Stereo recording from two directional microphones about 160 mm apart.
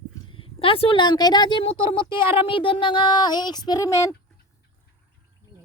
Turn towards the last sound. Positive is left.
turn(degrees=20)  # may be behind; listen again after turning